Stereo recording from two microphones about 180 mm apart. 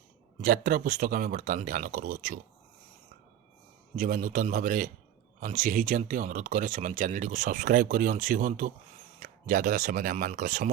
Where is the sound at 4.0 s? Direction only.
45° right (ahead or behind).